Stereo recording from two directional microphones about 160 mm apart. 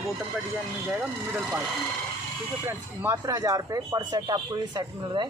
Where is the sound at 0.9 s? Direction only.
5° right (ahead or behind).